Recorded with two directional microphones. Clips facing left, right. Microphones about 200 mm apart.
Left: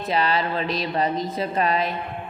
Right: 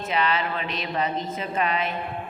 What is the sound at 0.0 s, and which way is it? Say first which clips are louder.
Speech: left 2 dB; 35° left (ahead or behind).